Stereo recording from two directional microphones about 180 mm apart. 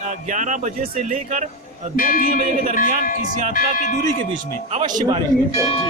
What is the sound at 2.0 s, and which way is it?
Speech, 50° left (ahead or behind).